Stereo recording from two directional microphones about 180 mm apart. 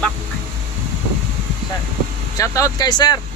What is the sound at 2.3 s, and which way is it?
Speech, 15° left (ahead or behind).